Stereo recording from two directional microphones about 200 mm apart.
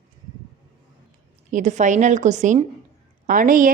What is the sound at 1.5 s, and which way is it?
A woman's voice, 40° right (ahead or behind).